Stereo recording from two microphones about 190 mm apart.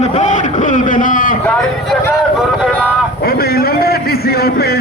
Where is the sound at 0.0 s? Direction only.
40° left (ahead or behind).